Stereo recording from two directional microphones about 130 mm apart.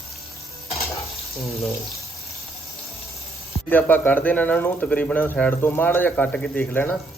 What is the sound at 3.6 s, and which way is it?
Speech, 15° left (ahead or behind).